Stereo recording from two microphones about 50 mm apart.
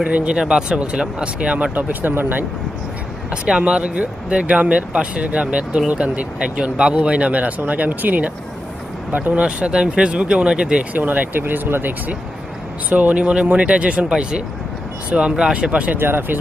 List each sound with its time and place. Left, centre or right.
0.0 s speech: right
1.7 s speech: right
3.4 s speech: centre
9.4 s speech: right
10.9 s speech: right
16.0 s speech: right